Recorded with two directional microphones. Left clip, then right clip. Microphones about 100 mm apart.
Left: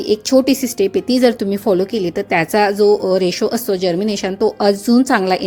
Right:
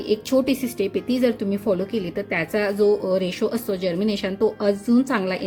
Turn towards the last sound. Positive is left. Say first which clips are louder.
# left 8 dB
turn(degrees=50)  # may be behind; listen again after turning